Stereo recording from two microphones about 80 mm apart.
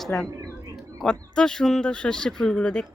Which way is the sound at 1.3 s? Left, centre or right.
Centre.